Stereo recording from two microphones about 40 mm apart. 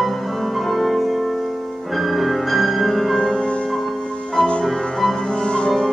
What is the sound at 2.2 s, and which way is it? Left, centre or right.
Music, centre.